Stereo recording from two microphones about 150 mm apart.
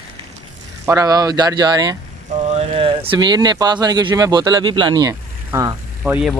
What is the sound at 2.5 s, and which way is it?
Speech, 40° right (ahead or behind).